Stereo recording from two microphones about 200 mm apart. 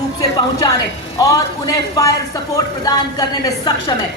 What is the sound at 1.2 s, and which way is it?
A man's voice, 15° left (ahead or behind).